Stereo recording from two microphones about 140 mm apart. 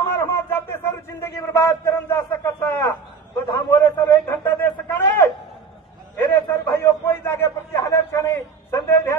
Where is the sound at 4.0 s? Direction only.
15° left (ahead or behind).